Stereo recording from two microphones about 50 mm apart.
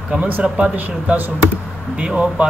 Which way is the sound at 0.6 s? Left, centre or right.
Right.